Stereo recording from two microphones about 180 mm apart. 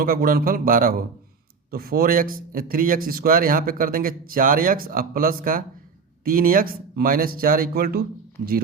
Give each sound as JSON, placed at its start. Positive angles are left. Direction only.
{"t": 0.0, "sound": "speech", "side_deg": -55}